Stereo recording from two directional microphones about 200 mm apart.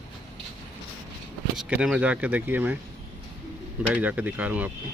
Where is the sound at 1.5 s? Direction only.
5° right (ahead or behind).